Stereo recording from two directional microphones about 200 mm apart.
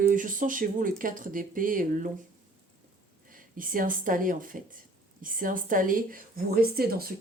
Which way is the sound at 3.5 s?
45° right (ahead or behind).